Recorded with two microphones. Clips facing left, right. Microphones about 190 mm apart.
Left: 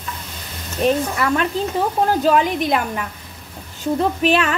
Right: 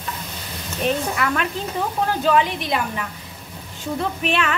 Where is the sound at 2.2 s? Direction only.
45° left (ahead or behind).